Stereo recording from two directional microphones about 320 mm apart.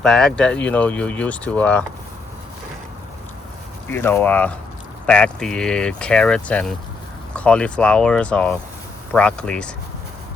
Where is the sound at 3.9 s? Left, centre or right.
Centre.